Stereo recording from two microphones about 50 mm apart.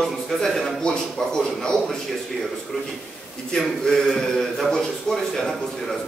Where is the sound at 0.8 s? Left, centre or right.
Centre.